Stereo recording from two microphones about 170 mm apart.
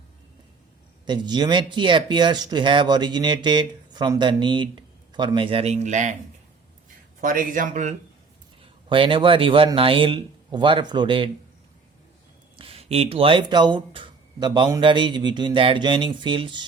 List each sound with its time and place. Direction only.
1.0 s speech: 25° right (ahead or behind); by 6.1 s 45° right (ahead or behind)
7.2 s speech: 50° right (ahead or behind)
8.9 s speech: 30° right (ahead or behind)
12.5 s speech: 35° right (ahead or behind)